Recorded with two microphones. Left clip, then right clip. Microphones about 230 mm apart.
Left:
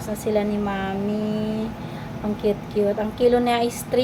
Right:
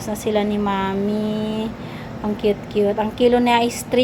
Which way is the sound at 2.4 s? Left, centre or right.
Right.